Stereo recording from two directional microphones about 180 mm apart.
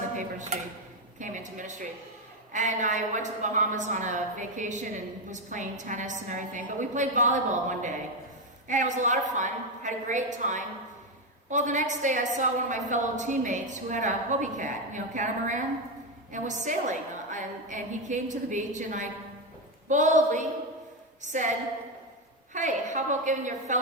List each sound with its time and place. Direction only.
0.2 s a woman's voice: 45° right (ahead or behind)
22.5 s a woman's voice: 45° right (ahead or behind)